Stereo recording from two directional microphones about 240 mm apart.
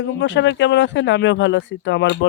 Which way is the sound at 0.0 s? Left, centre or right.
Left.